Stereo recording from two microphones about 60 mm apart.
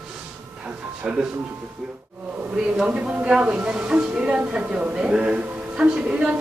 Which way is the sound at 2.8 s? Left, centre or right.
Centre.